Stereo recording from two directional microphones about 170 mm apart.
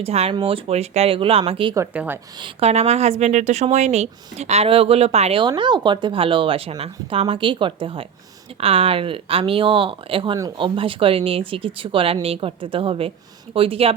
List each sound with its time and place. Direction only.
0.0 s speech: 35° right (ahead or behind)
1.7 s speech: 10° right (ahead or behind)
2.4 s speech: 35° right (ahead or behind)
10.3 s speech: 20° right (ahead or behind)
10.8 s speech: 30° right (ahead or behind)